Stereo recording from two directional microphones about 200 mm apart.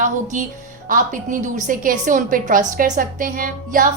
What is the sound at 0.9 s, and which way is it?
A woman's voice, 40° right (ahead or behind).